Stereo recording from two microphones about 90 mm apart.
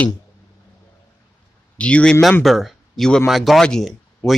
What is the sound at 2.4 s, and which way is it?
Speech, centre (ahead or behind).